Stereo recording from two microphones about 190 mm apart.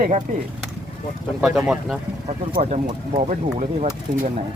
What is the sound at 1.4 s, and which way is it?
Speech, 5° right (ahead or behind).